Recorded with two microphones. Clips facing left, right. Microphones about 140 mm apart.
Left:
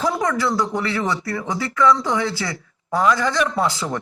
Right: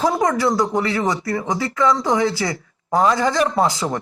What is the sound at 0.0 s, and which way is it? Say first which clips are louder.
Speech: right 3 dB; 20° right (ahead or behind).